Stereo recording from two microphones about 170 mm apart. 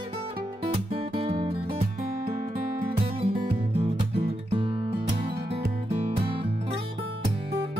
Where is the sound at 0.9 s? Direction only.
35° right (ahead or behind).